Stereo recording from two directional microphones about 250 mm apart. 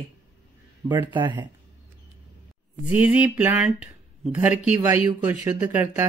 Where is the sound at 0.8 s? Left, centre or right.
Centre.